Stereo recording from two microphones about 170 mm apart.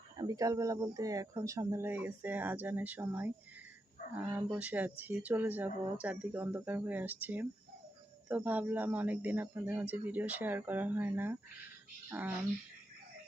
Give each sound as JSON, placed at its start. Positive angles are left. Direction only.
{"t": 0.2, "sound": "speech", "side_deg": -20}